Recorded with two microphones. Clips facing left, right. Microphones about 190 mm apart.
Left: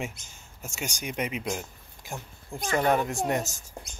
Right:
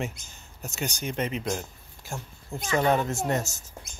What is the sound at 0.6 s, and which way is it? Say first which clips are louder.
Speech: right 3 dB; 10° left (ahead or behind).